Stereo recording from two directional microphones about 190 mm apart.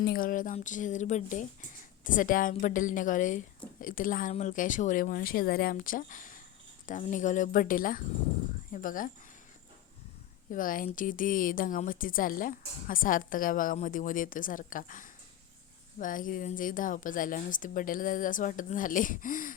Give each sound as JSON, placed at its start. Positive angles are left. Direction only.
{"t": 0.0, "sound": "speech", "side_deg": 50}
{"t": 10.5, "sound": "speech", "side_deg": 45}